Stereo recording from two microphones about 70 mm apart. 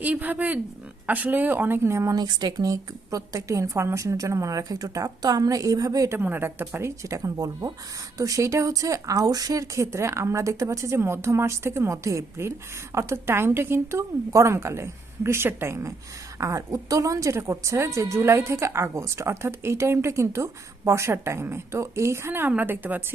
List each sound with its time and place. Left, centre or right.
0.0 s speech: right
2.1 s a woman's voice: right
6.1 s speech: right
8.2 s a woman's voice: right